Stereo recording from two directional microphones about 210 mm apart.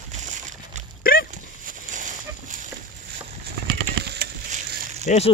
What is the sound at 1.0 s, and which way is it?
Dog, 40° left (ahead or behind).